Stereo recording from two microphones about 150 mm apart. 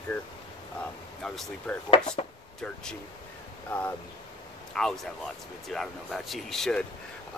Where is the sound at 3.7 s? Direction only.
15° left (ahead or behind).